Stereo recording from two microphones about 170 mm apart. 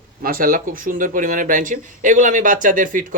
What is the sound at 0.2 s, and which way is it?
Speech, 60° right (ahead or behind).